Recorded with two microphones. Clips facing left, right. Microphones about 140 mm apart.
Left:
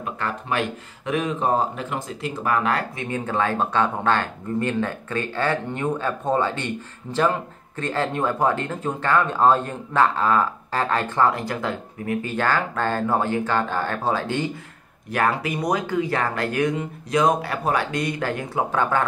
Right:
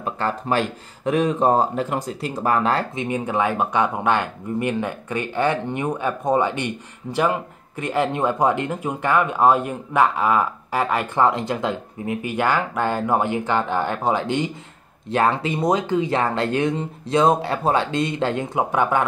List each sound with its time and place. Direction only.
0.0 s speech: 35° right (ahead or behind)
3.0 s speech: 15° right (ahead or behind)